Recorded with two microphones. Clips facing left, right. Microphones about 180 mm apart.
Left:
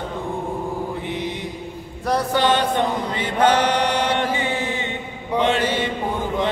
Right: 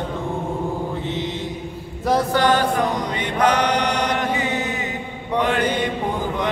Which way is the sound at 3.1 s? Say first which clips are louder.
Left 2 dB; 30° left (ahead or behind).